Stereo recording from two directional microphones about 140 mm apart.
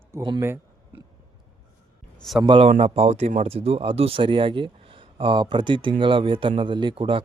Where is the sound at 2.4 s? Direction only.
35° right (ahead or behind).